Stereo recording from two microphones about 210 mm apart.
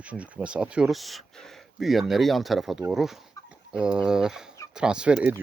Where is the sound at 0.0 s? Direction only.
5° right (ahead or behind).